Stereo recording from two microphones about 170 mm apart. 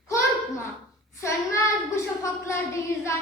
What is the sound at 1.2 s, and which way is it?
A child's voice, 15° left (ahead or behind).